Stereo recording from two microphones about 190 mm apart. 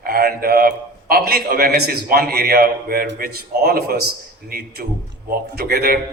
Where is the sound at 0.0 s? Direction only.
55° right (ahead or behind).